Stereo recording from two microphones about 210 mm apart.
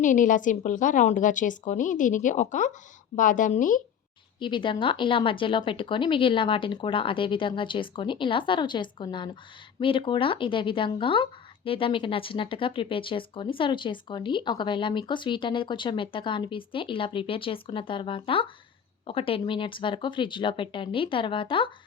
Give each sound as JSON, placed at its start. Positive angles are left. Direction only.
{"t": 0.0, "sound": "a woman's voice", "side_deg": 40}
{"t": 4.4, "sound": "speech", "side_deg": 20}